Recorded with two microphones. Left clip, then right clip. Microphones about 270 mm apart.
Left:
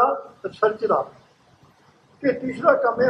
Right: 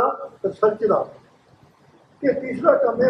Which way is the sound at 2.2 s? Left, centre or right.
Centre.